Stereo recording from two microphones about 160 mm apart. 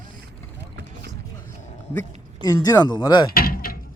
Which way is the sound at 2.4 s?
25° left (ahead or behind).